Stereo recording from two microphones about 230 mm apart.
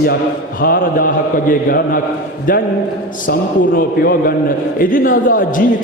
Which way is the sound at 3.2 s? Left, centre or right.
Left.